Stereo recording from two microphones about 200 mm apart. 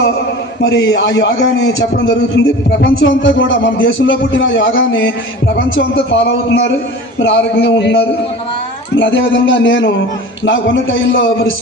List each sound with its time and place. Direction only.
0.6 s a man's voice: 70° left (ahead or behind)